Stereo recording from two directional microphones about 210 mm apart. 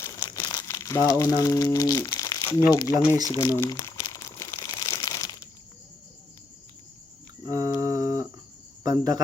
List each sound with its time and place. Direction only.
0.0 s crumpling: 20° left (ahead or behind)
2.6 s speech: 15° left (ahead or behind)
3.2 s crumpling: 15° left (ahead or behind)
7.4 s cricket: 15° right (ahead or behind)